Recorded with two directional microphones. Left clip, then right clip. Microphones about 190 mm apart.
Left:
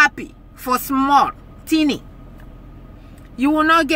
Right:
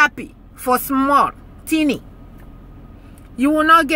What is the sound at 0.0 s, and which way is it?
A woman's voice, 10° right (ahead or behind).